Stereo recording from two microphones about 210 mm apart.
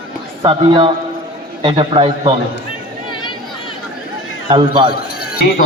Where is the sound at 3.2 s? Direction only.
20° left (ahead or behind).